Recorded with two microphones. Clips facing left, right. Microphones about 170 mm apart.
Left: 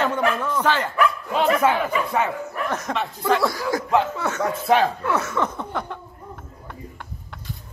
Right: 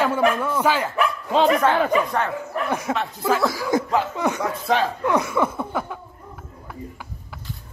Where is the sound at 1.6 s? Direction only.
10° left (ahead or behind).